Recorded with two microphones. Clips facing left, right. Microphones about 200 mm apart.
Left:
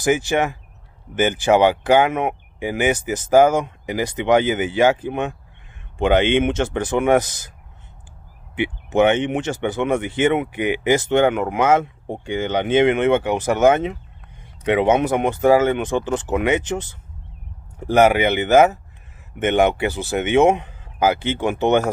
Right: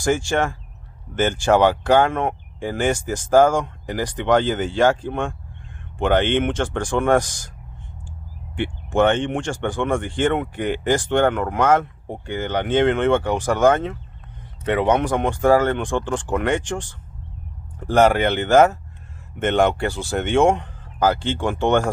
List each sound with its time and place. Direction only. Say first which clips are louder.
0.1 s speech: left 2 dB; 15° left (ahead or behind)
8.5 s speech: left 2 dB; 5° left (ahead or behind)
15.8 s speech: left 2 dB; 5° left (ahead or behind)